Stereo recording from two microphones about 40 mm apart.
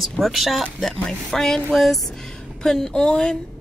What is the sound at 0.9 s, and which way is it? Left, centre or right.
Speech, centre.